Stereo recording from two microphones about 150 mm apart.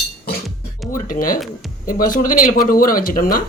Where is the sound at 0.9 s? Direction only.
65° left (ahead or behind).